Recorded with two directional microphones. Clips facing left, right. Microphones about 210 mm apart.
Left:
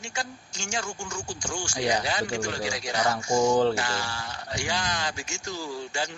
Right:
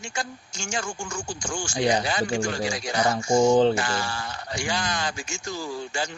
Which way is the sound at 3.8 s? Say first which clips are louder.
Right 3 dB; 50° right (ahead or behind).